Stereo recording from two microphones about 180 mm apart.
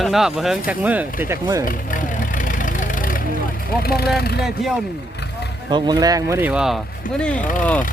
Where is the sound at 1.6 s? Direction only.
50° left (ahead or behind).